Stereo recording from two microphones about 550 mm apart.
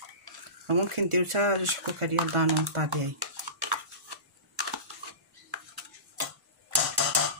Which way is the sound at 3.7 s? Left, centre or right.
Right.